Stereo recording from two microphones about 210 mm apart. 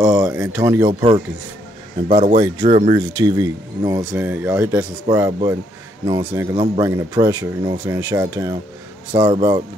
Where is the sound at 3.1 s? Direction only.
15° right (ahead or behind).